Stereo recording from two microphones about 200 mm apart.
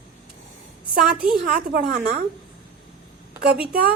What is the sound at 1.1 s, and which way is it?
Speech, 5° right (ahead or behind).